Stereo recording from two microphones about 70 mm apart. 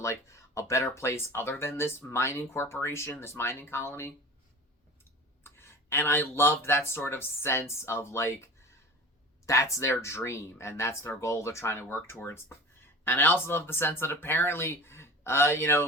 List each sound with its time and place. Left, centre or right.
0.0 s speech: left
5.4 s speech: left
9.5 s speech: left
9.9 s speech: left